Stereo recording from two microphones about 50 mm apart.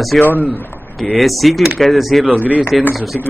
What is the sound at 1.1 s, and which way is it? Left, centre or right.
Speech, centre.